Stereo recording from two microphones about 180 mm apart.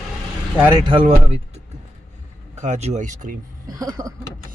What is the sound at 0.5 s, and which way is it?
Speech, 10° right (ahead or behind).